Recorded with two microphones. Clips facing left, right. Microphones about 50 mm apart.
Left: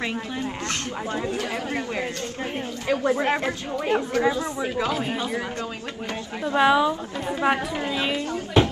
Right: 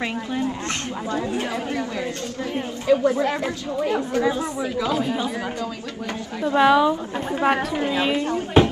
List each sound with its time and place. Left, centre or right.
1.7 s speech: left
6.5 s a woman's voice: centre
7.8 s a woman's voice: right
8.3 s speech: right